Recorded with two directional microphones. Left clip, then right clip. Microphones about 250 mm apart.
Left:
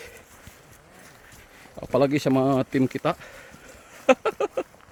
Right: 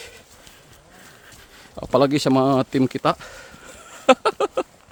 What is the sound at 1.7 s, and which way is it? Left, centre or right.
Speech, centre.